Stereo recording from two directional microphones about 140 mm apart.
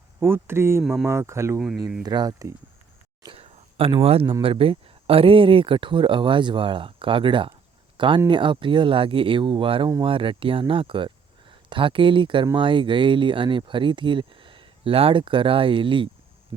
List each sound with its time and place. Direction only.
0.2 s speech: 15° right (ahead or behind)
1.5 s speech: 5° right (ahead or behind)
2.0 s speech: 30° right (ahead or behind)
3.2 s a sound: 45° right (ahead or behind)
4.4 s speech: 40° right (ahead or behind)